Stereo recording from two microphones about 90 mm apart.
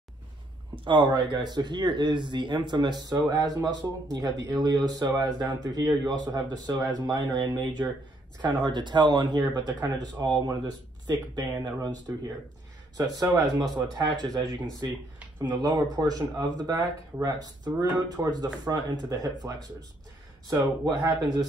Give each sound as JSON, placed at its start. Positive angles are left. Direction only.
{"t": 0.8, "sound": "speech", "side_deg": -60}
{"t": 20.4, "sound": "speech", "side_deg": -45}